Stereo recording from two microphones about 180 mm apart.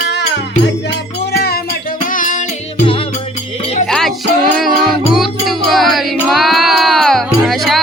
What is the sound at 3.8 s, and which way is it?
Music, centre (ahead or behind).